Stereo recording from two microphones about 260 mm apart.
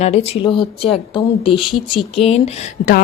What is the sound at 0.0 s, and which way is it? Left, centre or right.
A woman's voice, left.